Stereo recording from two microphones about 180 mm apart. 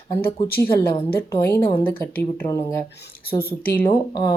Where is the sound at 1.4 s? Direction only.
15° left (ahead or behind).